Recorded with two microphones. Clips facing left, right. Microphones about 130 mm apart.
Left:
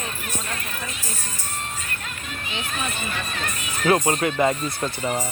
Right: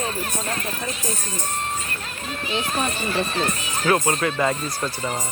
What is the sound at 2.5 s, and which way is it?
A child's voice, 35° right (ahead or behind).